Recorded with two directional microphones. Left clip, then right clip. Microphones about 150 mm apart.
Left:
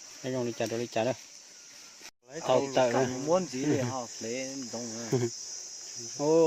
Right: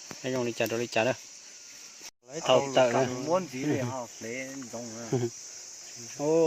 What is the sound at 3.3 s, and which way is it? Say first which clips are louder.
Cricket: left 1 dB; 40° left (ahead or behind).